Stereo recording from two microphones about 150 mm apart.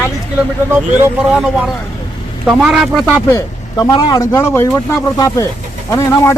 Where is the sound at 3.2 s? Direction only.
25° left (ahead or behind).